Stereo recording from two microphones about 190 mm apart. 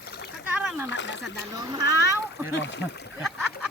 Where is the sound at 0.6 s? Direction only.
10° right (ahead or behind).